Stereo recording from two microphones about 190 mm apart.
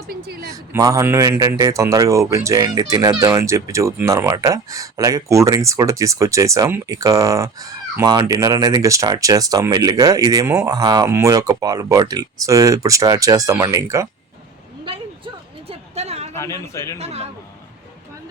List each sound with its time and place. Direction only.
0.1 s speech: 55° right (ahead or behind)
0.5 s a man's voice: 20° right (ahead or behind)
14.8 s a sound: 30° right (ahead or behind)
16.3 s a man's voice: 15° left (ahead or behind)
17.0 s a man's voice: 35° right (ahead or behind)